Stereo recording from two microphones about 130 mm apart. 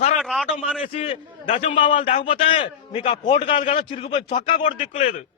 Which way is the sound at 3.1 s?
40° left (ahead or behind).